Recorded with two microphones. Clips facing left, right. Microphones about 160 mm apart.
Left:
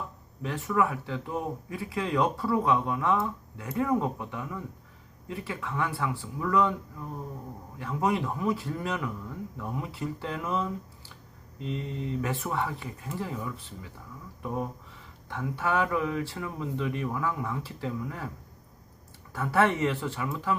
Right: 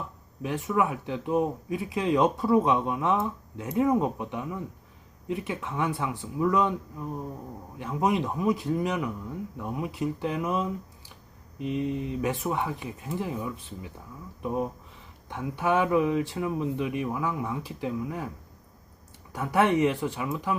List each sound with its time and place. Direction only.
0.4 s speech: 15° right (ahead or behind)
19.3 s speech: 15° right (ahead or behind)